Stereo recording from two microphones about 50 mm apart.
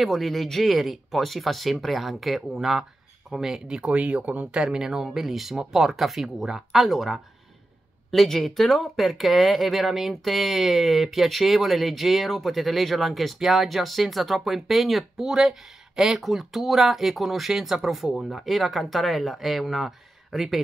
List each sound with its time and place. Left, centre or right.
0.0 s speech: centre; by 4.5 s right
4.6 s speech: centre